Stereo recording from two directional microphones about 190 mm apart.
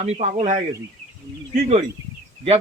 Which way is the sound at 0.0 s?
35° right (ahead or behind).